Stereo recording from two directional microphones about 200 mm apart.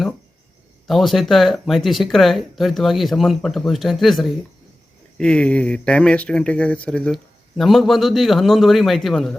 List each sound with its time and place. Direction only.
0.9 s speech: centre (ahead or behind)